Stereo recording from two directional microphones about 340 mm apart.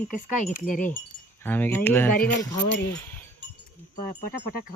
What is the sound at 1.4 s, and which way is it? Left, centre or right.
Speech, centre.